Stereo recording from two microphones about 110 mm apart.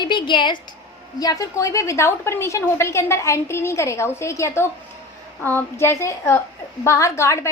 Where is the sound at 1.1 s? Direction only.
35° left (ahead or behind).